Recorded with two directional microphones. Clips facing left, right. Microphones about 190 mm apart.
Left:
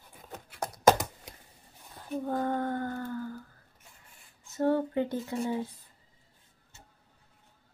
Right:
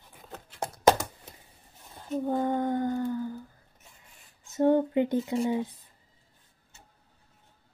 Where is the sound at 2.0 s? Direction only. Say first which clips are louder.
Right 3 dB; 20° right (ahead or behind).